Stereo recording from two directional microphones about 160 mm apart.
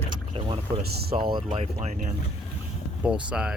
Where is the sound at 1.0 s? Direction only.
70° right (ahead or behind).